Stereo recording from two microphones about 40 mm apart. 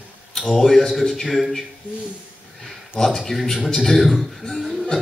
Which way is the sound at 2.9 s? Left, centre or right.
Centre.